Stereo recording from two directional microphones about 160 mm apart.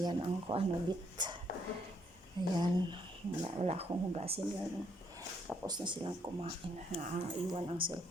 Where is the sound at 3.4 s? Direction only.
40° right (ahead or behind).